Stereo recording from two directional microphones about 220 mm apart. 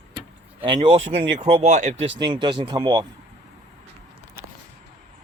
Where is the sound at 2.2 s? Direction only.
20° right (ahead or behind).